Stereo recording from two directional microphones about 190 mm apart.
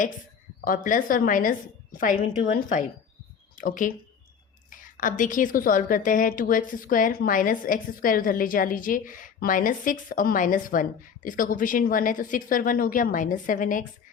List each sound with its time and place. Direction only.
0.6 s a woman's voice: 45° left (ahead or behind)